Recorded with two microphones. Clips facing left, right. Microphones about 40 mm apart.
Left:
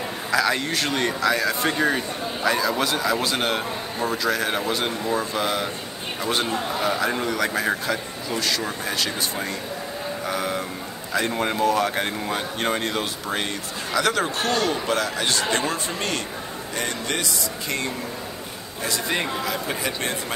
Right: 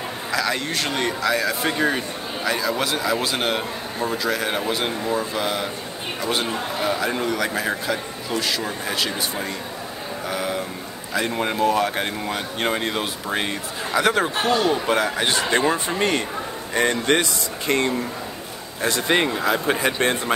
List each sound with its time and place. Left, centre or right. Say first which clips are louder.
0.3 s speech: left 2 dB; centre; by 16.2 s right
16.7 s speech: right 8 dB; right